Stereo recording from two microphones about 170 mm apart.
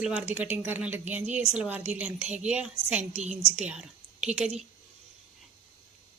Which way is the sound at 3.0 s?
40° right (ahead or behind).